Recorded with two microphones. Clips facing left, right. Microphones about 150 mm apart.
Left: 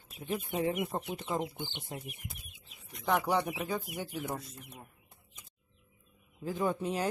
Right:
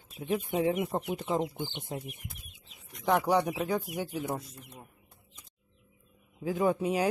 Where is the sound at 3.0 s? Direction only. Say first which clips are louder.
Right 4 dB; 15° right (ahead or behind).